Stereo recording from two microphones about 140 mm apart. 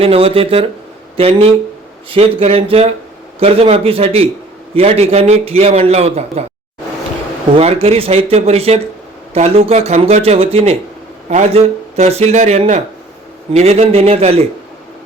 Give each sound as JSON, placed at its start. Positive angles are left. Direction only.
{"t": 0.0, "sound": "a man's voice", "side_deg": -45}
{"t": 7.5, "sound": "a man's voice", "side_deg": -45}